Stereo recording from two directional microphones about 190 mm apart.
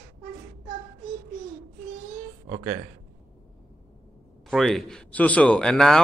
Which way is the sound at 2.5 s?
25° right (ahead or behind).